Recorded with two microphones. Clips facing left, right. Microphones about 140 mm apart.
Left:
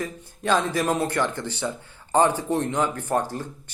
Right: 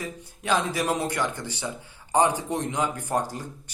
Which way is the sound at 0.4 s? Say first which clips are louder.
Left 3 dB; 15° right (ahead or behind).